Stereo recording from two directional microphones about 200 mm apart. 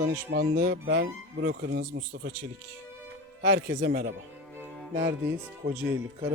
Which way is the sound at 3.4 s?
60° right (ahead or behind).